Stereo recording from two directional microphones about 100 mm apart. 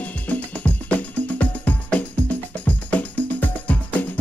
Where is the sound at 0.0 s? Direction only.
15° left (ahead or behind).